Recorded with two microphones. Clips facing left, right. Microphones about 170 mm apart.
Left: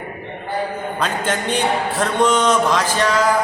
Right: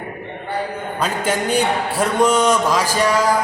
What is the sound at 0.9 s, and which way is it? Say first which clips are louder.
A man's voice: right 2 dB; 10° right (ahead or behind).